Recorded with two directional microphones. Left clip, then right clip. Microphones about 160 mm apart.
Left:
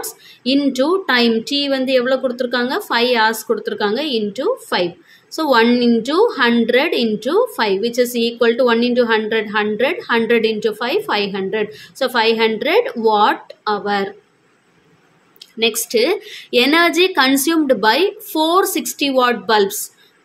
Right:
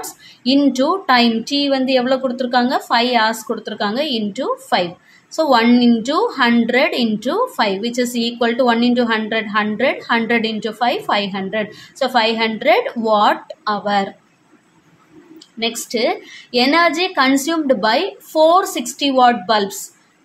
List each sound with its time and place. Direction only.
0.0 s a woman's voice: 15° left (ahead or behind)
15.6 s a woman's voice: 25° left (ahead or behind)